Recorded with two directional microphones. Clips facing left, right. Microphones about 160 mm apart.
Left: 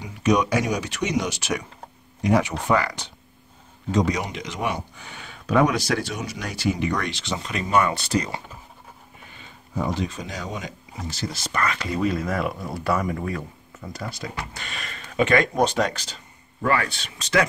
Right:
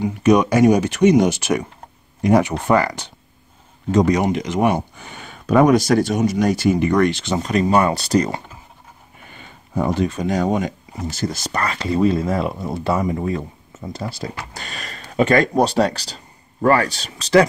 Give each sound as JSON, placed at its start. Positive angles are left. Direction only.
{"t": 0.0, "sound": "speech", "side_deg": -55}
{"t": 9.3, "sound": "speech", "side_deg": -55}